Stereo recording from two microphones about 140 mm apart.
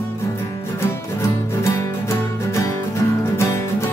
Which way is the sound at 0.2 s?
20° left (ahead or behind).